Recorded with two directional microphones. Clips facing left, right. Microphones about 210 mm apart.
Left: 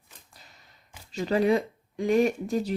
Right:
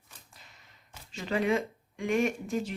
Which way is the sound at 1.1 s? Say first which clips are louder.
Left 5 dB; 40° left (ahead or behind).